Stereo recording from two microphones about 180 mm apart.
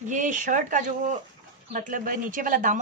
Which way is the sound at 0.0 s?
45° right (ahead or behind).